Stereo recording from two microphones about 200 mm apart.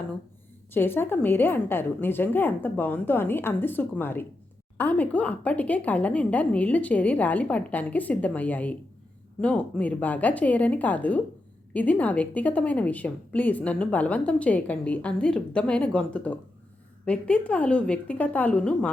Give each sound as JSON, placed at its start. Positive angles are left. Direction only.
{"t": 0.7, "sound": "a woman's voice", "side_deg": 10}